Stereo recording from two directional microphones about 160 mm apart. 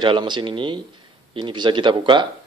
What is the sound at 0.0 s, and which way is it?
A man's voice, 30° right (ahead or behind).